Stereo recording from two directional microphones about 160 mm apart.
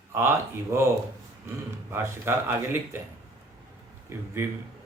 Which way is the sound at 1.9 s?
15° right (ahead or behind).